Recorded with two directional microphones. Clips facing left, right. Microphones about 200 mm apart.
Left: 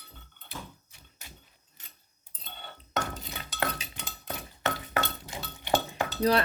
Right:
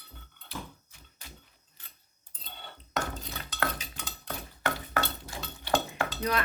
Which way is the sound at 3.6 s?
20° left (ahead or behind).